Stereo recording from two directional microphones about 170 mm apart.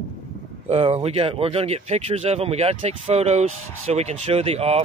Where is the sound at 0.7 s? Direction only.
35° right (ahead or behind).